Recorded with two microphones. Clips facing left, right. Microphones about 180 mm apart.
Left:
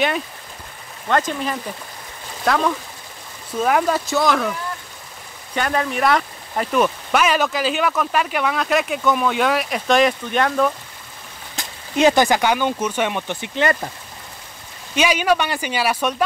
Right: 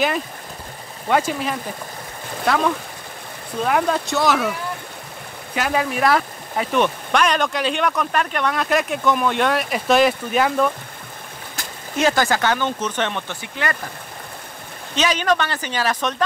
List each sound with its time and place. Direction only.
1.0 s speech: 10° right (ahead or behind)
11.5 s speech: 20° left (ahead or behind)
13.4 s speech: 25° left (ahead or behind)
15.0 s speech: 10° left (ahead or behind)